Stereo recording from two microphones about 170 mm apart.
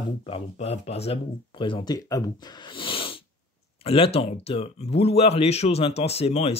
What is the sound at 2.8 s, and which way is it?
Sneeze, 30° left (ahead or behind).